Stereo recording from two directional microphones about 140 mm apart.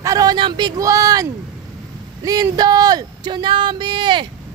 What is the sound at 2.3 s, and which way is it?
Speech, 25° right (ahead or behind).